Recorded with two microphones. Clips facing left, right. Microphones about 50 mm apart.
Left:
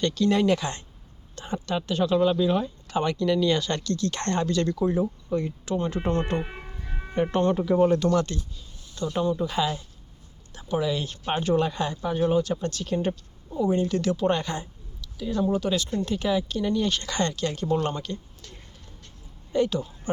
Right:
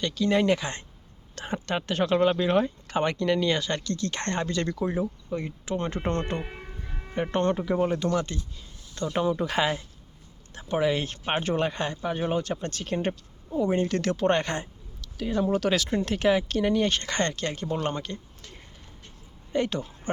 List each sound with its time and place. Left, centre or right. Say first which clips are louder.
0.0 s speech: left 3 dB; centre
0.3 s speech: left 1 dB; right
1.5 s speech: left 1 dB; right; by 5.7 s centre
6.0 s speech: left 2 dB; centre
6.3 s speech: left 4 dB; centre
7.2 s speech: left 2 dB; centre
9.0 s speech: even; right
10.5 s speech: right 1 dB; right
16.0 s speech: right 2 dB; right
17.5 s speech: left 3 dB; centre
19.5 s speech: left 3 dB; right